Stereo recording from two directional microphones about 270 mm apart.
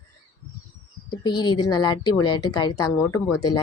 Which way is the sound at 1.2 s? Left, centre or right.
Centre.